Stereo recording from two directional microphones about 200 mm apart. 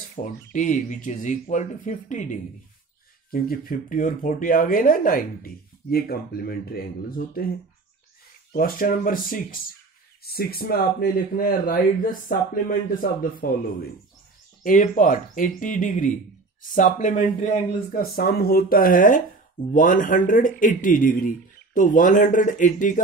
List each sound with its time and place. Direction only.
0.1 s speech: 40° left (ahead or behind)
8.5 s speech: 45° left (ahead or behind)
14.6 s speech: 40° left (ahead or behind)